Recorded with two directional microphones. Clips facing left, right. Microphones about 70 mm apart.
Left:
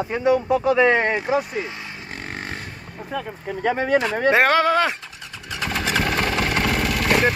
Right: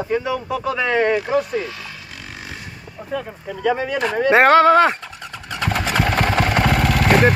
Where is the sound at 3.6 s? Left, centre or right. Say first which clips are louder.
Even; left.